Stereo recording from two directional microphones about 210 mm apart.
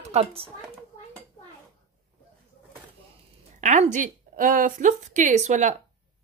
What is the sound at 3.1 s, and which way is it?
Speech, 35° right (ahead or behind).